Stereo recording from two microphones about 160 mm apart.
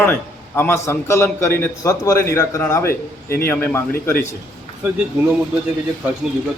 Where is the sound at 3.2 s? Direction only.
70° left (ahead or behind).